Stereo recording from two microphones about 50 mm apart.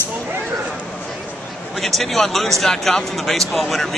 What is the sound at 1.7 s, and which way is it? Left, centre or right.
Speech, centre.